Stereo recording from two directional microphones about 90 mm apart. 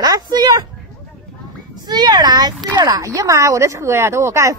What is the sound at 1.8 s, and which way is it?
Speech, 50° right (ahead or behind).